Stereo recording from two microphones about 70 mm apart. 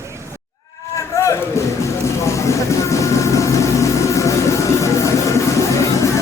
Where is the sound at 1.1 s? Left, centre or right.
Left.